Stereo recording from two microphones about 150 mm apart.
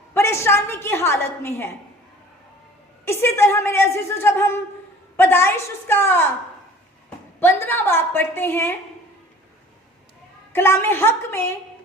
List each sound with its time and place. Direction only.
0.1 s a woman's voice: 15° left (ahead or behind)
3.1 s a woman's voice: 15° left (ahead or behind)
7.3 s a woman's voice: 15° left (ahead or behind)
10.5 s a woman's voice: 15° left (ahead or behind)